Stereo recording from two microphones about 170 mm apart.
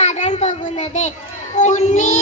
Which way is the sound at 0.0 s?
45° left (ahead or behind).